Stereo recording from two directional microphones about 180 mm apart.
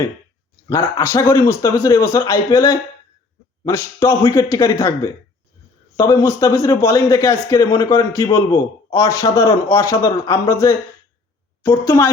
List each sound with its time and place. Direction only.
0.7 s a man's voice: 20° left (ahead or behind)